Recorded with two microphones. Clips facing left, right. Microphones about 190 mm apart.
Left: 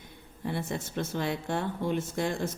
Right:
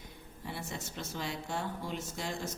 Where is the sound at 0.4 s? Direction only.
55° left (ahead or behind).